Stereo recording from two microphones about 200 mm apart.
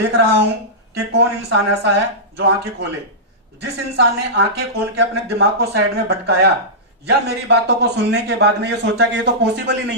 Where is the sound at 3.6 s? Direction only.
60° right (ahead or behind).